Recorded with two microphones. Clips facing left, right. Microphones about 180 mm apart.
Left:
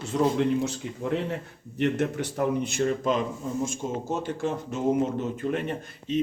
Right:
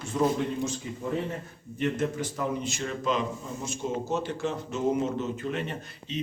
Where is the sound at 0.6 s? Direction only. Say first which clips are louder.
Left 2 dB; 70° left (ahead or behind).